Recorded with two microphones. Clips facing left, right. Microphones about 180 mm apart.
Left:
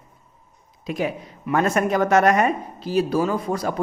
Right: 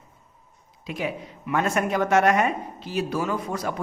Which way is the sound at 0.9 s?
40° left (ahead or behind).